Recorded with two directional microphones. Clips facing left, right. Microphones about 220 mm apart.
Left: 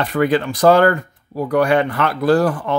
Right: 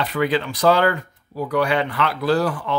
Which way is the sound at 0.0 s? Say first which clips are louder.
Left 4 dB; 50° left (ahead or behind).